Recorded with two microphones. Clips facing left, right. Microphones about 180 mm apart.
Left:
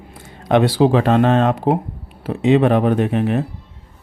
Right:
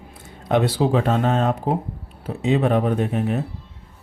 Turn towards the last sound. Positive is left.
turn(degrees=80)